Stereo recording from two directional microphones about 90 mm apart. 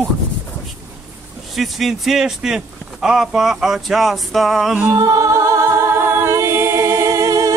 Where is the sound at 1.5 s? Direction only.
Centre (ahead or behind).